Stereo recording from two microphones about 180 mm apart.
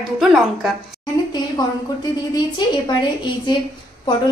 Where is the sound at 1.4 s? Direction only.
25° left (ahead or behind).